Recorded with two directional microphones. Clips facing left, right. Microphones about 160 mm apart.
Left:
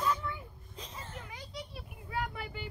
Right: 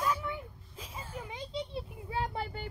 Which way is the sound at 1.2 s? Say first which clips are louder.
Right 7 dB; 25° right (ahead or behind).